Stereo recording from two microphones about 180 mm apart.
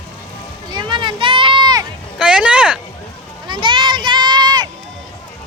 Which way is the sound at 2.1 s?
5° right (ahead or behind).